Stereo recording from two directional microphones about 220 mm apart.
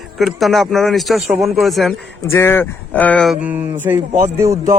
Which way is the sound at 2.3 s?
10° left (ahead or behind).